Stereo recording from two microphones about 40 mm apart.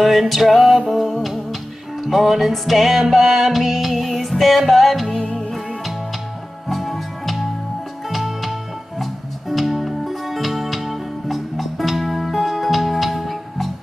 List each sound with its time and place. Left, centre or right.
0.0 s music: centre
5.1 s music: left
6.7 s music: centre